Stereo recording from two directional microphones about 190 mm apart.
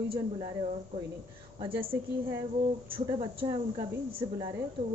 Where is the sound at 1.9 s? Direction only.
15° right (ahead or behind).